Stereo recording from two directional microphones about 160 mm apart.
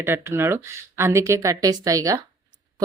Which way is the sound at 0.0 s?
15° right (ahead or behind).